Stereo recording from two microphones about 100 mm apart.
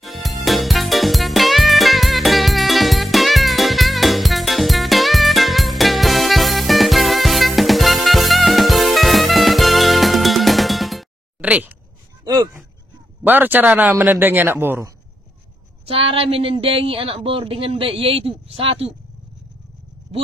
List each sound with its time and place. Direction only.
0.0 s music: centre (ahead or behind)
11.4 s a sound: 15° right (ahead or behind)
13.2 s a man's voice: 20° right (ahead or behind)
15.8 s speech: 70° right (ahead or behind)